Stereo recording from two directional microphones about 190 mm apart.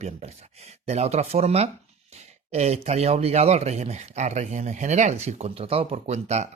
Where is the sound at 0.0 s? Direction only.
35° right (ahead or behind).